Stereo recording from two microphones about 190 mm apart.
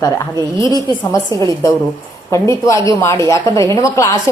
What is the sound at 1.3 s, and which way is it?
Speech, 20° right (ahead or behind).